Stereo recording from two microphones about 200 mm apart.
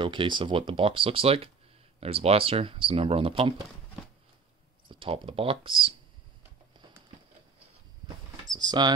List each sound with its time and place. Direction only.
0.0 s speech: 25° right (ahead or behind)
4.8 s speech: 25° right (ahead or behind)
8.5 s speech: 20° right (ahead or behind)